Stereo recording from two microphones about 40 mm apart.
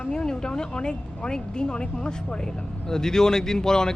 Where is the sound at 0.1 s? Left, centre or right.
Centre.